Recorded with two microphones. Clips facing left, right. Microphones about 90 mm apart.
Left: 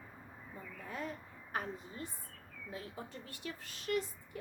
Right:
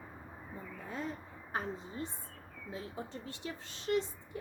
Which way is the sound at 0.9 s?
25° right (ahead or behind).